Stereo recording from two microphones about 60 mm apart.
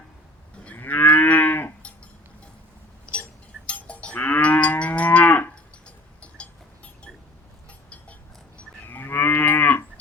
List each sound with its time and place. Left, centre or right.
0.6 s moo: left
3.7 s livestock: left
8.9 s moo: left